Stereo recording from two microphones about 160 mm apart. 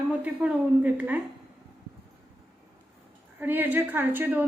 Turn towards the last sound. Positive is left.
turn(degrees=-10)  # may be behind; listen again after turning